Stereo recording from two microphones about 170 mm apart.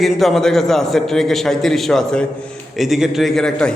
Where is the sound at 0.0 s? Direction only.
Centre (ahead or behind).